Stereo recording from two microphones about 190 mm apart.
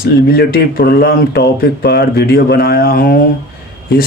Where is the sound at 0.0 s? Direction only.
55° left (ahead or behind).